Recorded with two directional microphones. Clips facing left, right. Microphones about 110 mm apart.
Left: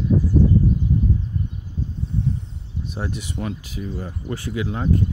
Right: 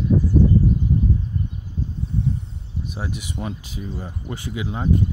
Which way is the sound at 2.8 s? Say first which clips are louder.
Left 2 dB; 10° right (ahead or behind).